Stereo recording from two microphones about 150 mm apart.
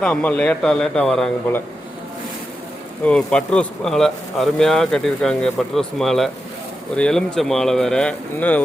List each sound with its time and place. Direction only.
0.0 s a man's voice: 10° left (ahead or behind)
3.0 s a man's voice: 5° left (ahead or behind)